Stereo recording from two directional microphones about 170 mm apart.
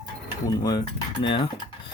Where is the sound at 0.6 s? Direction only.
25° left (ahead or behind).